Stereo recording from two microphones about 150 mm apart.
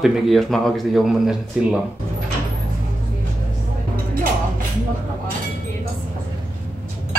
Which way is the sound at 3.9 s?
70° right (ahead or behind).